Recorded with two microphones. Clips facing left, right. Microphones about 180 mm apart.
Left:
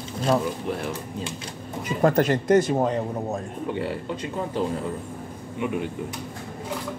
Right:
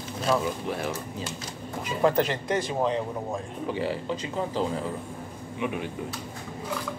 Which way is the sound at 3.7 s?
60° left (ahead or behind).